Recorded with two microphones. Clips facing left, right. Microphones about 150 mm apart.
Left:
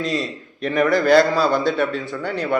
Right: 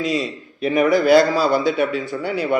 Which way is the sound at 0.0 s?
Centre (ahead or behind).